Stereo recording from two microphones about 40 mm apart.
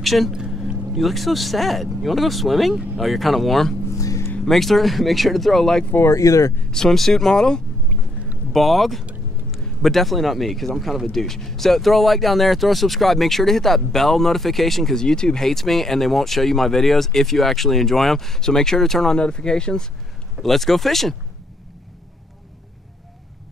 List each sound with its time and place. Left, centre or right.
0.0 s speech: centre
0.3 s a sound: centre
0.9 s speech: centre
8.5 s speech: centre
19.1 s speech: left
20.4 s speech: centre